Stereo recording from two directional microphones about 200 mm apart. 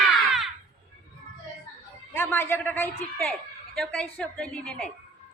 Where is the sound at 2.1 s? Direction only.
10° left (ahead or behind).